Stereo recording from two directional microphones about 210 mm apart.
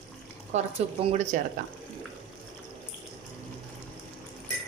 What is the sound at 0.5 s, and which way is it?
Speech, 35° right (ahead or behind).